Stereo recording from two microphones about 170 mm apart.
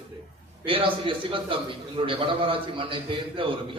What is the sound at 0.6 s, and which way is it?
A man's voice, 30° right (ahead or behind).